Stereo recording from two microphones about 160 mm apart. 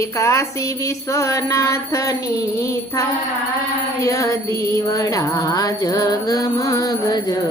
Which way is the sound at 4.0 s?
20° left (ahead or behind).